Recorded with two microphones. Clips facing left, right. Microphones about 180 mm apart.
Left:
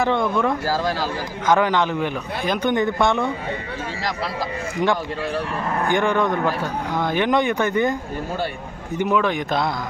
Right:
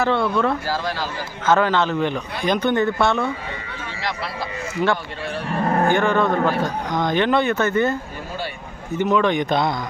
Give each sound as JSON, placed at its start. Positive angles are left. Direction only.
{"t": 0.0, "sound": "speech", "side_deg": 15}
{"t": 0.7, "sound": "speech", "side_deg": 40}
{"t": 1.5, "sound": "speech", "side_deg": 15}
{"t": 4.8, "sound": "speech", "side_deg": 20}
{"t": 5.6, "sound": "speech", "side_deg": -40}
{"t": 5.9, "sound": "speech", "side_deg": 15}
{"t": 9.0, "sound": "speech", "side_deg": 10}